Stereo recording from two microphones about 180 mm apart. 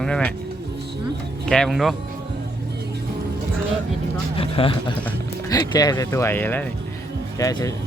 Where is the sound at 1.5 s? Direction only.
5° left (ahead or behind).